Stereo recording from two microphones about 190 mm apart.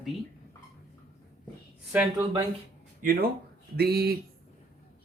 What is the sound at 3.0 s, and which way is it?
Speech, 50° right (ahead or behind).